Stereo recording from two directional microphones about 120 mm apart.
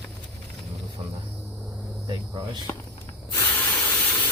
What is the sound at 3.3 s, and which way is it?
Spray, 15° left (ahead or behind).